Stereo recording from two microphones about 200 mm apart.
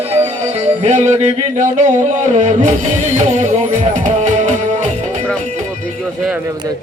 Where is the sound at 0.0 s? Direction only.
30° right (ahead or behind).